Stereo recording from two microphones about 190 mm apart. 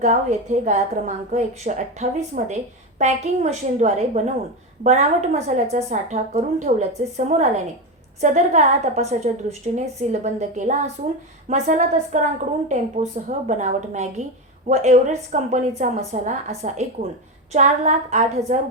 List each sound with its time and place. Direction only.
0.0 s a woman's voice: 40° right (ahead or behind)